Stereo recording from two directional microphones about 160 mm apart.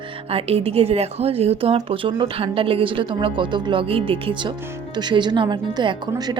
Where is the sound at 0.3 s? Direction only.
40° right (ahead or behind).